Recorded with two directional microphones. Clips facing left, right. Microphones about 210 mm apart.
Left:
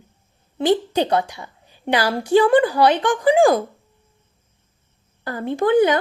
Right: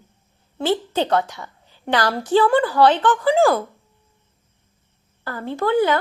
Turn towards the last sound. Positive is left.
turn(degrees=15)  # may be behind; listen again after turning